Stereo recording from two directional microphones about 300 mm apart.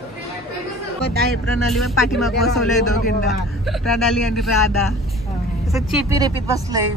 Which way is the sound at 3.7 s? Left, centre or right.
Centre.